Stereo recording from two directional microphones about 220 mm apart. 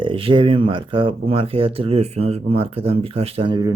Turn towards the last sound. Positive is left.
turn(degrees=-20)  # may be behind; listen again after turning